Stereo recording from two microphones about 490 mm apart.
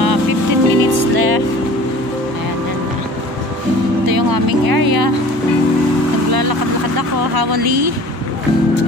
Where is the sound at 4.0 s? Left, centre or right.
Right.